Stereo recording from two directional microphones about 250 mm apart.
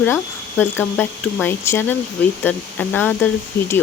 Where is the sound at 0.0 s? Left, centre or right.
Centre.